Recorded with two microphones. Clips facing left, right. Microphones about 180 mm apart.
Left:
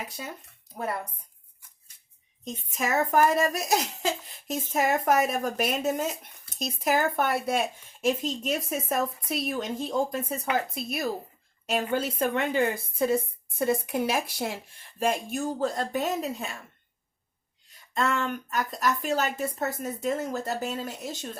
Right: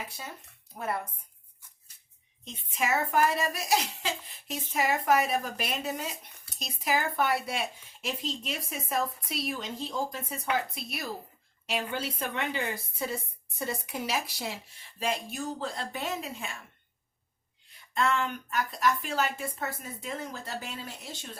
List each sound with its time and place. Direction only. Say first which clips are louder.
2.4 s a woman's voice: left 2 dB; 45° left (ahead or behind)
17.9 s a woman's voice: left 1 dB; 40° left (ahead or behind)